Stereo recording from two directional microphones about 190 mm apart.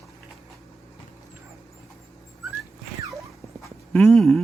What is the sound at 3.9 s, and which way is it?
Speech, centre (ahead or behind).